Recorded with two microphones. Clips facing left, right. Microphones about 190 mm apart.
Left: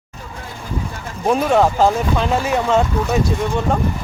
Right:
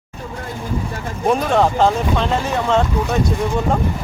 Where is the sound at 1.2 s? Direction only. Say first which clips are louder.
Left 1 dB; 5° left (ahead or behind).